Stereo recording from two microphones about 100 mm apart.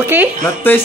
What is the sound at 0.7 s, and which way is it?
Speech, 20° left (ahead or behind).